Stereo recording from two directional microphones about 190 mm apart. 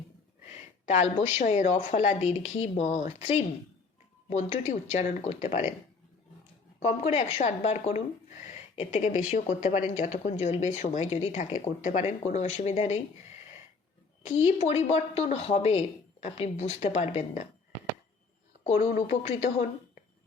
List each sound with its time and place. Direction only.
0.9 s a woman's voice: 40° left (ahead or behind)
6.8 s speech: 35° left (ahead or behind)
14.4 s speech: 35° left (ahead or behind)
19.1 s speech: 35° left (ahead or behind)